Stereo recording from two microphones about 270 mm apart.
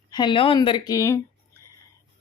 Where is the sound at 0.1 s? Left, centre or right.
Centre.